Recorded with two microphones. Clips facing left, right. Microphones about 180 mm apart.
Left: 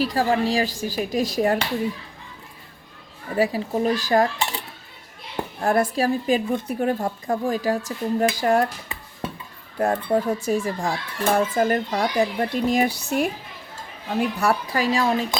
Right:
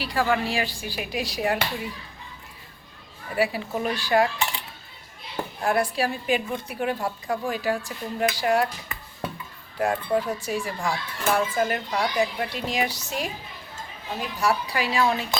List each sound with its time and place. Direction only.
0.0 s a child's voice: 40° left (ahead or behind)
3.3 s a child's voice: 40° left (ahead or behind)
9.7 s a child's voice: 40° left (ahead or behind)